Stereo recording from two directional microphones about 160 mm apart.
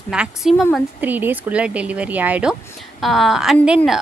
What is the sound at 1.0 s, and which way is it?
A woman's voice, 10° right (ahead or behind).